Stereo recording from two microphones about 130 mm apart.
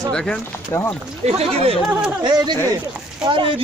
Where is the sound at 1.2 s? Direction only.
50° right (ahead or behind).